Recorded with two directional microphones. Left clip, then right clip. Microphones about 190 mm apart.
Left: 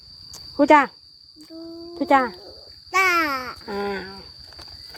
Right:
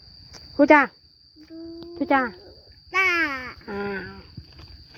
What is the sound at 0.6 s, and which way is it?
Speech, 5° left (ahead or behind).